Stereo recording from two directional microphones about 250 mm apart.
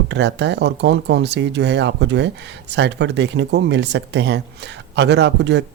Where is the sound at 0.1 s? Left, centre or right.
Right.